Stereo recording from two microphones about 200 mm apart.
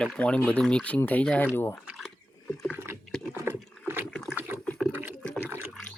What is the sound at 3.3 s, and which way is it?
Rowboat, 10° right (ahead or behind).